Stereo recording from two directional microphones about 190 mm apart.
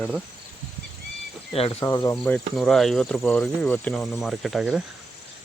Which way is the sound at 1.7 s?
15° left (ahead or behind).